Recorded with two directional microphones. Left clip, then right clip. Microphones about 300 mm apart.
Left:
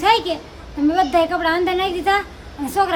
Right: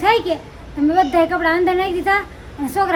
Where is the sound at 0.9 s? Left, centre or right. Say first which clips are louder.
Right 2 dB; centre.